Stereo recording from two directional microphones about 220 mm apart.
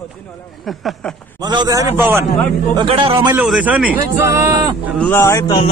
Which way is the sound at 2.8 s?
25° right (ahead or behind).